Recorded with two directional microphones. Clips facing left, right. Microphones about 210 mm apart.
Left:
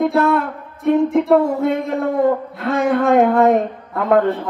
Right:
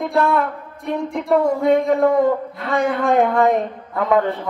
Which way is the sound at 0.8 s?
Centre (ahead or behind).